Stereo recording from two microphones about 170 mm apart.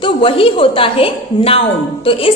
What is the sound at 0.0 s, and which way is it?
A woman's voice, 30° left (ahead or behind).